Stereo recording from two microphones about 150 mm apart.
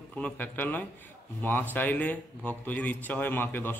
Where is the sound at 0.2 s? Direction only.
10° left (ahead or behind).